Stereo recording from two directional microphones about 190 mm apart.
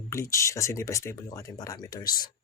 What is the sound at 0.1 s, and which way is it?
Speech, 15° left (ahead or behind).